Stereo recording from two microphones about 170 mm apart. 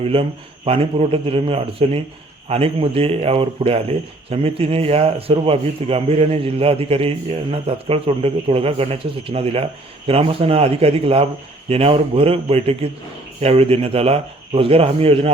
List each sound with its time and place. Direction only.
0.0 s speech: 35° right (ahead or behind)